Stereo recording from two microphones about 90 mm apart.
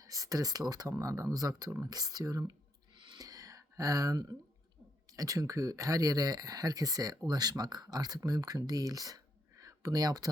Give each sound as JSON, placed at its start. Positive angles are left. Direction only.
{"t": 0.0, "sound": "speech", "side_deg": -40}
{"t": 3.2, "sound": "a sound", "side_deg": -40}
{"t": 5.1, "sound": "speech", "side_deg": -40}